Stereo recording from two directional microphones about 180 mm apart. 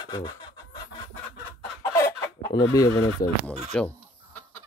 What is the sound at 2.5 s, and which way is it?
Speech, 20° left (ahead or behind).